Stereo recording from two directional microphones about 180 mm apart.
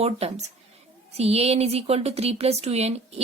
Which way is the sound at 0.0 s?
35° right (ahead or behind).